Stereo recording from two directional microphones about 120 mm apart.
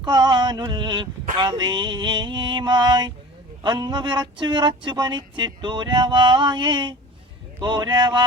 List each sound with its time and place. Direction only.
0.0 s speech: 40° right (ahead or behind)